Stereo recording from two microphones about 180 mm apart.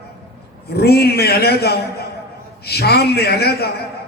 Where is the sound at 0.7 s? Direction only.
60° left (ahead or behind).